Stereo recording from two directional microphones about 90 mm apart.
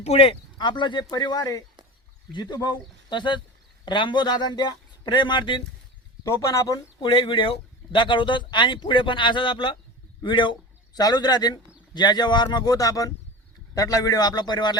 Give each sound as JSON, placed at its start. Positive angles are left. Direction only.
{"t": 0.2, "sound": "speech", "side_deg": 75}
{"t": 6.2, "sound": "speech", "side_deg": 35}
{"t": 7.0, "sound": "a man's voice", "side_deg": 75}